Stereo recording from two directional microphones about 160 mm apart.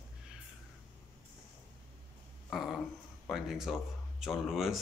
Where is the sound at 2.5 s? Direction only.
Centre (ahead or behind).